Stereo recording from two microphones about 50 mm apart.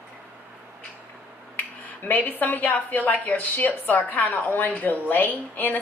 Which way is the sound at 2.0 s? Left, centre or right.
Left.